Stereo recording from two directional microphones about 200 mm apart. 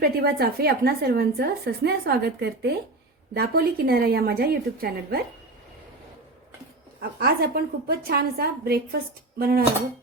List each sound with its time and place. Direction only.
0.0 s a woman's voice: 50° right (ahead or behind)
7.2 s a woman's voice: 50° right (ahead or behind)